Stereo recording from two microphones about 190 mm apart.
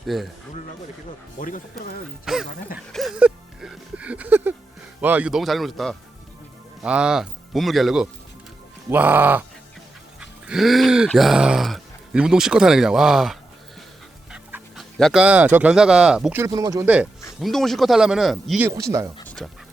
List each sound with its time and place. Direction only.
0.1 s speech: centre (ahead or behind)
1.4 s speech: 45° left (ahead or behind)
2.2 s speech: centre (ahead or behind)
2.7 s music: centre (ahead or behind)
4.9 s speech: 10° right (ahead or behind)
8.9 s music: 10° right (ahead or behind)
10.2 s speech: 5° right (ahead or behind)
16.5 s speech: 20° right (ahead or behind)
16.8 s music: 5° right (ahead or behind)
17.4 s speech: centre (ahead or behind); by 19.0 s 15° right (ahead or behind)
19.2 s dog: 5° left (ahead or behind)